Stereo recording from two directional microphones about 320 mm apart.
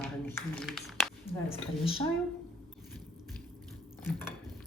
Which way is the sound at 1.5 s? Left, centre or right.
Centre.